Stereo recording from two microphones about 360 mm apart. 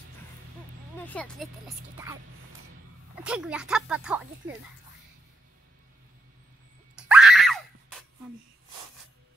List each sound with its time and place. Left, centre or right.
0.9 s speech: centre
3.2 s speech: centre
7.0 s screaming: centre